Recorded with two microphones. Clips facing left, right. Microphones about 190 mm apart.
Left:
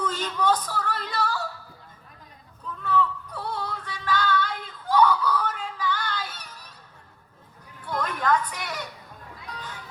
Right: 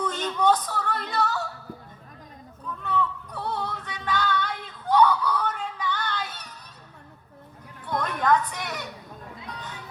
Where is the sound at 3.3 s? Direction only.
25° right (ahead or behind).